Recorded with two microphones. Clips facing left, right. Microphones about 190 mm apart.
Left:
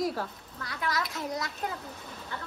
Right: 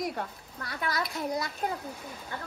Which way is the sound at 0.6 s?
55° right (ahead or behind).